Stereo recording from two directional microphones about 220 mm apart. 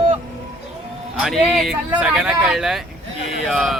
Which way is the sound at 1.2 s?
Centre (ahead or behind).